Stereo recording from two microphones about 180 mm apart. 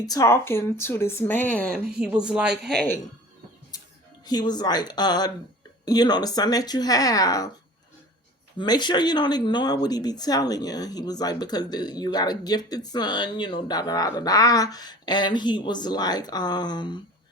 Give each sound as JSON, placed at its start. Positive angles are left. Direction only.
{"t": 0.0, "sound": "speech", "side_deg": 20}
{"t": 2.0, "sound": "speech", "side_deg": -5}
{"t": 4.3, "sound": "speech", "side_deg": 25}
{"t": 8.5, "sound": "speech", "side_deg": 25}